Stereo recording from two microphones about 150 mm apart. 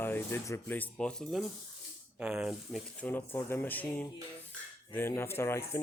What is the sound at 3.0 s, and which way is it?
Speech, 15° left (ahead or behind).